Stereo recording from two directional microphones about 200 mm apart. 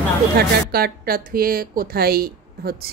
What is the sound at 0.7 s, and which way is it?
Speech, 50° right (ahead or behind).